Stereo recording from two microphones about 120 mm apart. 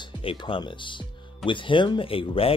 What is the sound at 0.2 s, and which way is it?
Speech, 50° left (ahead or behind).